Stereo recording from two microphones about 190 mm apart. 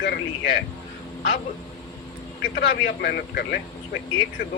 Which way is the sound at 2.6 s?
60° left (ahead or behind).